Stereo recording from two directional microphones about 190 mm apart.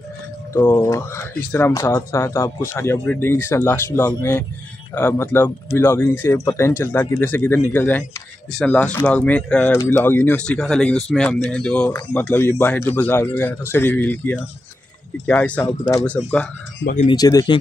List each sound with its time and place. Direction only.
0.5 s speech: 15° left (ahead or behind)